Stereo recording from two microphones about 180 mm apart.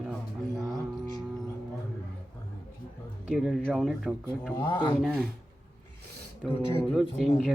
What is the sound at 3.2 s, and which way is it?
A man's voice, centre (ahead or behind).